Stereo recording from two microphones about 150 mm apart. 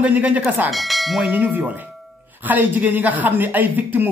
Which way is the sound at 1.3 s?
10° right (ahead or behind).